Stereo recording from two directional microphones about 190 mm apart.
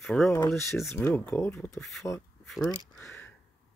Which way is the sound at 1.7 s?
Centre (ahead or behind).